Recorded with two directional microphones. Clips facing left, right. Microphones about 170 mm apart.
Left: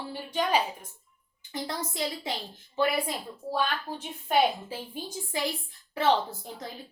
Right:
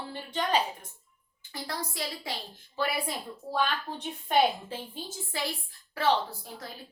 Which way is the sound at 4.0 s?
5° left (ahead or behind).